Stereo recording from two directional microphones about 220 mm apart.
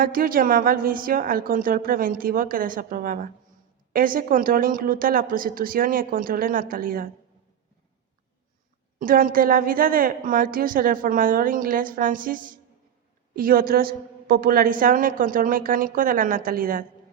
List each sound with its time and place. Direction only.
0.0 s a woman's voice: 40° right (ahead or behind)
9.0 s a woman's voice: 40° right (ahead or behind)